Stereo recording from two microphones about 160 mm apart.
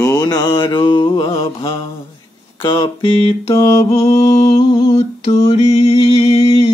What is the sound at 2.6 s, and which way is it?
Mantra, 30° left (ahead or behind).